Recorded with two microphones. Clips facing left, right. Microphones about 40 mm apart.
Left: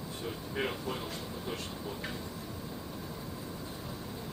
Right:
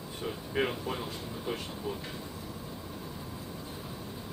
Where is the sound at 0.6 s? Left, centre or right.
Centre.